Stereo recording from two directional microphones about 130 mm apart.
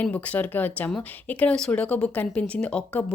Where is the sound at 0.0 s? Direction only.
10° left (ahead or behind).